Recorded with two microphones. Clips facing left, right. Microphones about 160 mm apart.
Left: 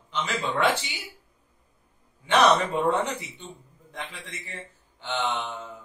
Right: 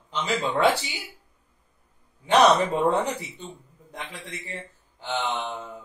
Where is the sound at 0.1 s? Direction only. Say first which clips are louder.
Right 3 dB; 35° right (ahead or behind).